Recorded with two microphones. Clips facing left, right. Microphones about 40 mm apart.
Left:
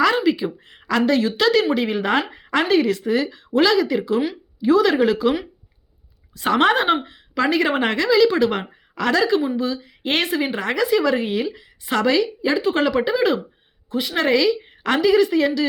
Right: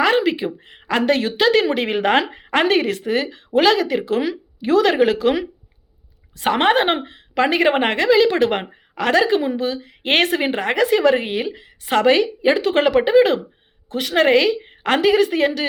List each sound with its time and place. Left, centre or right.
0.2 s a sound: right
0.6 s speech: right
1.0 s a woman's voice: right
1.4 s a woman's voice: right
1.7 s a woman's voice: right
6.5 s a woman's voice: right
10.6 s a woman's voice: right
13.9 s a woman's voice: right